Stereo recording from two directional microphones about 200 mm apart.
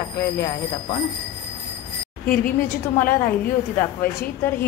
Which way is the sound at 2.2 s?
45° left (ahead or behind).